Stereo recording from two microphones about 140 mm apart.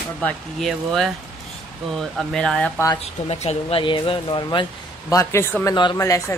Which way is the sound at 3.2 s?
50° left (ahead or behind).